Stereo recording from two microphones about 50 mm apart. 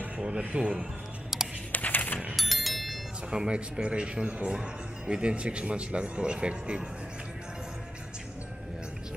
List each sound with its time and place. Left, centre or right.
0.2 s a man's voice: right
1.7 s a sound: left
2.3 s music: centre
3.3 s a man's voice: centre